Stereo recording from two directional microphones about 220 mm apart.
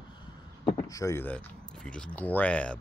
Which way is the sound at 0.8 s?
15° left (ahead or behind).